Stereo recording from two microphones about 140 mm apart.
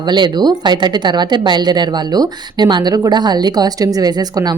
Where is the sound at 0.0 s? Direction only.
30° right (ahead or behind).